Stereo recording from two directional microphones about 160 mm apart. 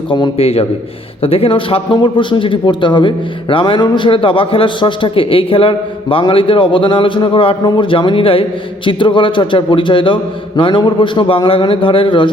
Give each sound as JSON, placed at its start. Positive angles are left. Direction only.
{"t": 0.1, "sound": "a man's voice", "side_deg": 35}